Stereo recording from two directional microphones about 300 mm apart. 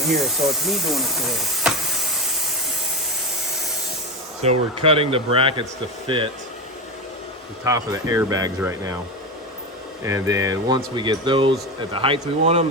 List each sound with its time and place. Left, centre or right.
0.0 s speech: centre
4.4 s speech: centre
7.6 s speech: centre
10.0 s speech: centre